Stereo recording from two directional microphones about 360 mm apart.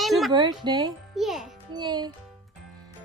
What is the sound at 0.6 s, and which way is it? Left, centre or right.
Speech, centre.